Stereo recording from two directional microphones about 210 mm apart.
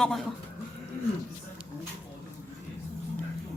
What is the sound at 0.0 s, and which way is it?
Speech, centre (ahead or behind).